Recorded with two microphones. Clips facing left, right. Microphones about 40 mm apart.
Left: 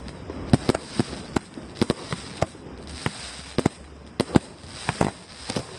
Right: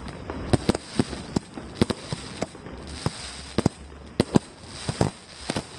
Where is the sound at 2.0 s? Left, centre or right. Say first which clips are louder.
Left 4 dB; left.